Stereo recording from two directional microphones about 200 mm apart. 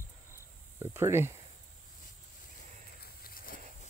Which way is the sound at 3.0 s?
50° left (ahead or behind).